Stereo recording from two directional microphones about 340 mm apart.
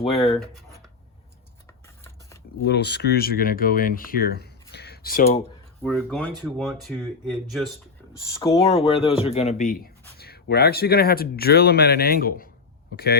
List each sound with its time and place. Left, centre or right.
2.6 s speech: left
5.8 s speech: centre; by 13.1 s left